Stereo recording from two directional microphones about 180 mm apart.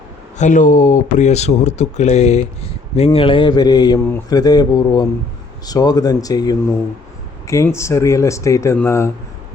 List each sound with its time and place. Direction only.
0.3 s speech: 45° left (ahead or behind); by 9.0 s 15° left (ahead or behind)